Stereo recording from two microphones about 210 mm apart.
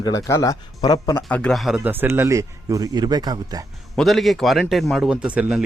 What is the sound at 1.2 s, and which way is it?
Speech, 5° left (ahead or behind).